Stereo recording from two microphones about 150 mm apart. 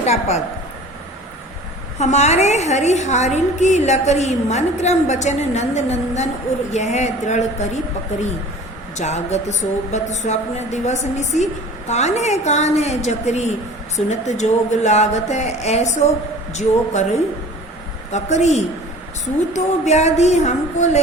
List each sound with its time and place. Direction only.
0.0 s a woman's voice: 45° left (ahead or behind)
2.0 s a woman's voice: 50° left (ahead or behind)
9.0 s a woman's voice: 50° left (ahead or behind)